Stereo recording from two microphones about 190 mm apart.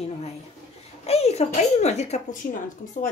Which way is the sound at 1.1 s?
35° left (ahead or behind).